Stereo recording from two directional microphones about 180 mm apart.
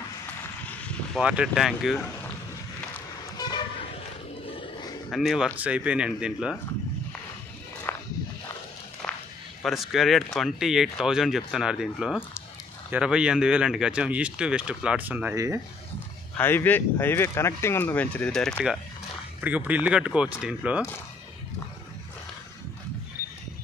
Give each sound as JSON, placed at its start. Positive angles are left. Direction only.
{"t": 0.7, "sound": "vehicle", "side_deg": 5}
{"t": 1.2, "sound": "speech", "side_deg": -5}
{"t": 3.3, "sound": "vehicle", "side_deg": 20}
{"t": 4.5, "sound": "a sound", "side_deg": 30}
{"t": 5.1, "sound": "speech", "side_deg": 0}
{"t": 7.9, "sound": "walk", "side_deg": 10}
{"t": 9.0, "sound": "walk", "side_deg": 5}
{"t": 9.6, "sound": "speech", "side_deg": 0}
{"t": 16.3, "sound": "speech", "side_deg": 10}